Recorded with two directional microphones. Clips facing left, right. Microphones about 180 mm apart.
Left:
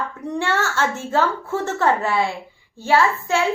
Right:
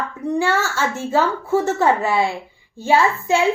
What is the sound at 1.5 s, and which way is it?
A woman's voice, 15° right (ahead or behind).